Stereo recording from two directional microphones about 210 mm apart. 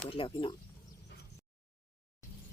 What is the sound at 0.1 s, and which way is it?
Speech, 25° left (ahead or behind).